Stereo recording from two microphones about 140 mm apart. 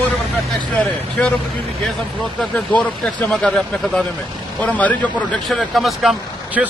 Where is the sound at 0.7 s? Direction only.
10° left (ahead or behind).